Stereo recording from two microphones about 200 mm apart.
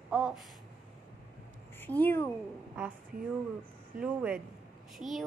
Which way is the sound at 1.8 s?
10° left (ahead or behind).